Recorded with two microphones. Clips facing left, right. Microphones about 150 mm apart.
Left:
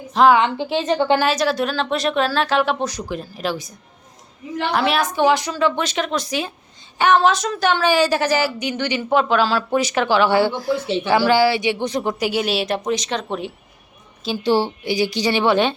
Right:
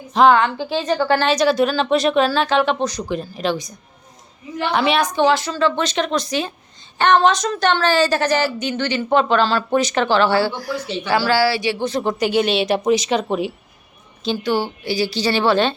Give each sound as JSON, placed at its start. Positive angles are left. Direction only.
{"t": 0.1, "sound": "speech", "side_deg": 0}
{"t": 0.3, "sound": "a woman's voice", "side_deg": 25}
{"t": 1.2, "sound": "speech", "side_deg": 0}
{"t": 5.2, "sound": "a woman's voice", "side_deg": 15}
{"t": 14.4, "sound": "a woman's voice", "side_deg": 30}
{"t": 14.8, "sound": "a woman's voice", "side_deg": 20}